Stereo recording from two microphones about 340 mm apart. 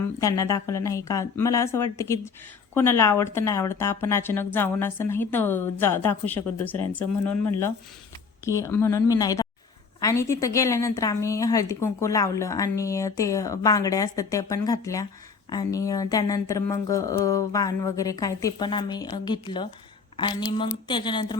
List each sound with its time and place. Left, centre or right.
0.2 s a woman's voice: centre
8.4 s a woman's voice: centre